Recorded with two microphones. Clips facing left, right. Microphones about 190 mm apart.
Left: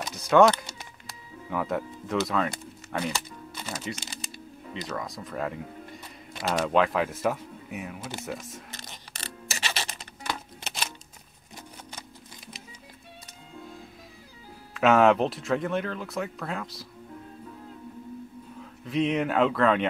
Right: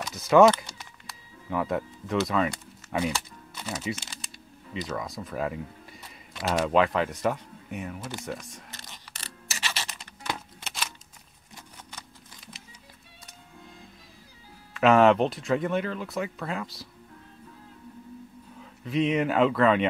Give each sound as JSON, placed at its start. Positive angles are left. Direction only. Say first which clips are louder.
{"t": 0.1, "sound": "speech", "louder": "right 1 dB", "side_deg": 0}
{"t": 1.5, "sound": "speech", "louder": "right 1 dB", "side_deg": 0}
{"t": 3.6, "sound": "typing", "louder": "right 3 dB", "side_deg": -5}
{"t": 4.7, "sound": "speech", "louder": "right 2 dB", "side_deg": 0}
{"t": 8.9, "sound": "a sound", "louder": "left 4 dB", "side_deg": 20}
{"t": 14.7, "sound": "speech", "louder": "right 1 dB", "side_deg": 0}
{"t": 18.6, "sound": "speech", "louder": "even", "side_deg": 0}